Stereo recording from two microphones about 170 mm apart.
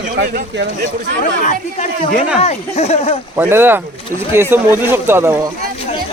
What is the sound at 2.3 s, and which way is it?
Speech, 40° left (ahead or behind).